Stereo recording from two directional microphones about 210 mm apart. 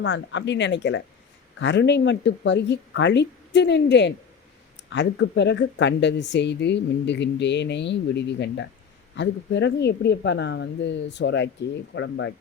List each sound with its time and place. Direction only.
0.0 s speech: 60° left (ahead or behind)